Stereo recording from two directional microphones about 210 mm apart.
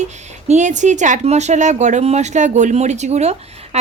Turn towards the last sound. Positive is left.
turn(degrees=-30)  # may be behind; listen again after turning